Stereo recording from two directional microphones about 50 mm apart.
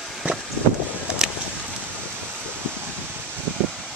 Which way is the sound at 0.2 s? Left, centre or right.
Right.